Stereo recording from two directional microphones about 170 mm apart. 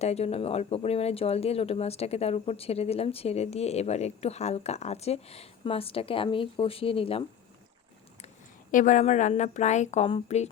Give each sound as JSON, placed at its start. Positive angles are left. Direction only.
{"t": 0.0, "sound": "speech", "side_deg": 40}
{"t": 8.7, "sound": "a woman's voice", "side_deg": 50}